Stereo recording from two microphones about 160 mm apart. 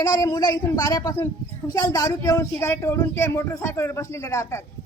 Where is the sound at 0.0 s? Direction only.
25° left (ahead or behind).